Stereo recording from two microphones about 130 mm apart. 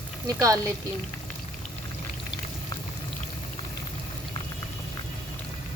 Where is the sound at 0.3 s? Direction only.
25° right (ahead or behind).